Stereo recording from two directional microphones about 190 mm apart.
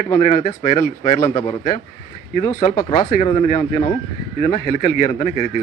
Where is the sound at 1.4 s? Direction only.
20° left (ahead or behind).